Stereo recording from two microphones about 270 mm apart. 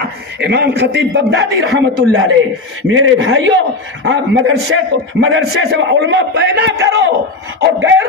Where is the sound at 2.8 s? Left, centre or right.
Right.